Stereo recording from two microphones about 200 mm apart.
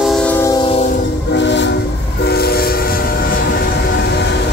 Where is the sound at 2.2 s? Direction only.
50° left (ahead or behind).